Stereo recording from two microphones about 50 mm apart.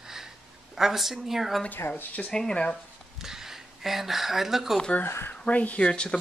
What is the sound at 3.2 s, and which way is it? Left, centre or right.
Speech, centre.